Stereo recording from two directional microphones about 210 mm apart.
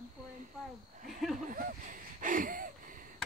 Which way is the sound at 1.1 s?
Centre (ahead or behind).